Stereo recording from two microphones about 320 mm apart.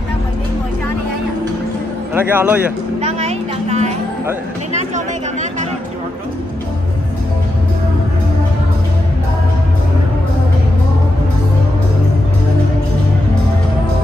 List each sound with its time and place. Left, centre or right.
2.1 s speech: centre
3.0 s a sound: right
4.7 s chatter: right